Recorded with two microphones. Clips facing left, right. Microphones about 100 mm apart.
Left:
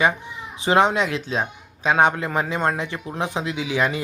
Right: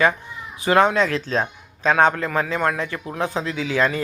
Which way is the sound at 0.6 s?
20° left (ahead or behind).